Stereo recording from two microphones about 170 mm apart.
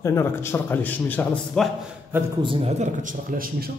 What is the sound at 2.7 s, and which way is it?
Speech, 45° right (ahead or behind).